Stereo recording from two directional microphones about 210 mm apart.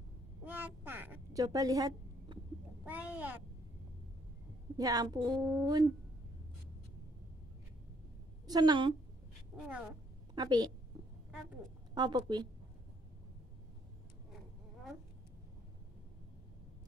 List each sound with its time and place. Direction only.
0.5 s a sound: 10° right (ahead or behind)
2.8 s speech: 5° right (ahead or behind)
4.7 s speech: 15° right (ahead or behind)
8.5 s a woman's voice: 20° right (ahead or behind)
10.3 s a woman's voice: 20° right (ahead or behind)
11.9 s a woman's voice: 20° right (ahead or behind)